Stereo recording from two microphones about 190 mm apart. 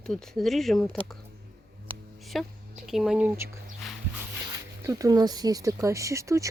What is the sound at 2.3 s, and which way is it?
Speech, centre (ahead or behind).